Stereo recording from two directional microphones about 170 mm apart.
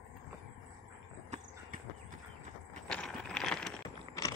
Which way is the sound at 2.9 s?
5° left (ahead or behind).